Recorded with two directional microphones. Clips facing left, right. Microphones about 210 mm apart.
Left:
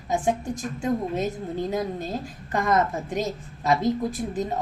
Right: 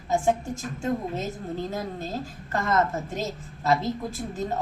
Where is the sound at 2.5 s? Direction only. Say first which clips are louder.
Left 2 dB; 15° left (ahead or behind).